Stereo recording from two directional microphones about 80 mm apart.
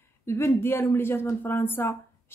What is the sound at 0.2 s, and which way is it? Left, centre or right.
A woman's voice, left.